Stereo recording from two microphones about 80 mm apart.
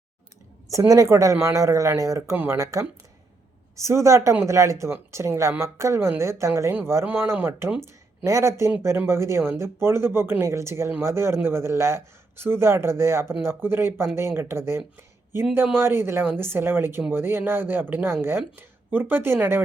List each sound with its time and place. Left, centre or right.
0.7 s speech: right
2.3 s speech: right
2.6 s speech: right